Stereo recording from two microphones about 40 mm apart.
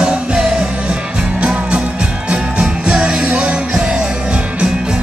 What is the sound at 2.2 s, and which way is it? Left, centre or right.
Music, right.